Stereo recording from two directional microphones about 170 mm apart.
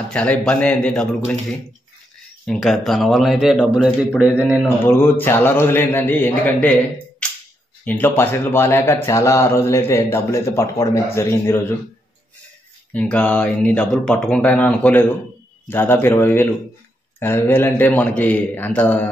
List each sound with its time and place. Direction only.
0.1 s speech: 5° left (ahead or behind)
2.4 s speech: centre (ahead or behind)
4.6 s speech: 15° left (ahead or behind)
7.8 s speech: 10° left (ahead or behind)
12.9 s speech: 10° left (ahead or behind)